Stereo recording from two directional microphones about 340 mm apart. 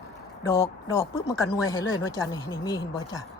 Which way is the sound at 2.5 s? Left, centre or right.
Centre.